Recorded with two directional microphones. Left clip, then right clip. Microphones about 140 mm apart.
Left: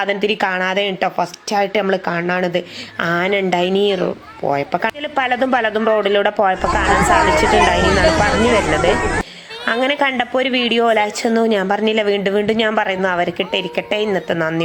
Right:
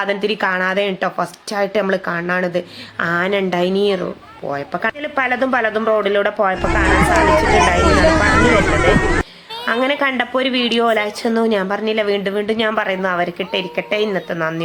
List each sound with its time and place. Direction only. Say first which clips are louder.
0.0 s a woman's voice: left 1 dB; 15° left (ahead or behind)
9.6 s a woman's voice: left 1 dB; 20° left (ahead or behind)